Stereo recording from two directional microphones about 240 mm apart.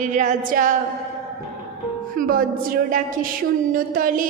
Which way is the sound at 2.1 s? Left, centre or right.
Right.